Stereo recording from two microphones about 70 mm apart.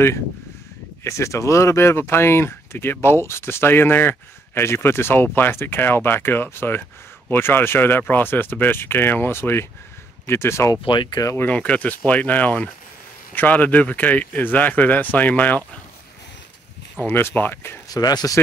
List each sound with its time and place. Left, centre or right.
1.0 s speech: left
10.7 s speech: left
11.3 s speech: left
17.0 s speech: left
17.8 s speech: left